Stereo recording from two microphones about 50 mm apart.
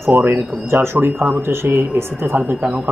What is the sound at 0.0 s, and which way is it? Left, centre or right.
Speech, right.